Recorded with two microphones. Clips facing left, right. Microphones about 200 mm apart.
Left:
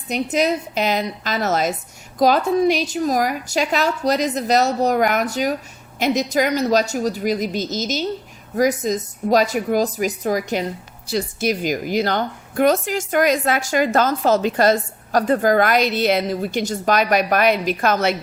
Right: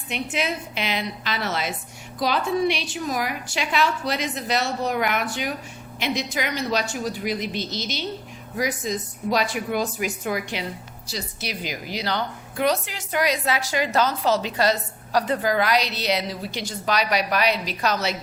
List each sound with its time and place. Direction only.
0.1 s a woman's voice: 40° left (ahead or behind)